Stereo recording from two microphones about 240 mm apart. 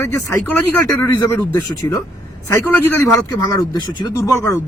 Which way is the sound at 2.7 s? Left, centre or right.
Centre.